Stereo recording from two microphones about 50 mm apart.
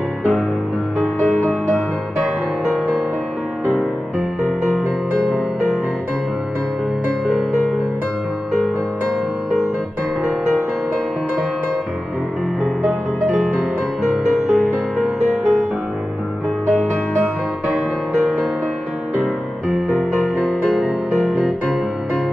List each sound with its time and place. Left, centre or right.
1.2 s music: centre
7.2 s music: centre
14.0 s music: centre
17.7 s music: centre
20.0 s music: centre